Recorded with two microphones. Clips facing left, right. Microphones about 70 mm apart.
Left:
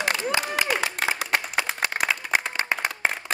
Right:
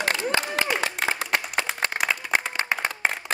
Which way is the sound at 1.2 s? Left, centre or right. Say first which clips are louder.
Even; centre.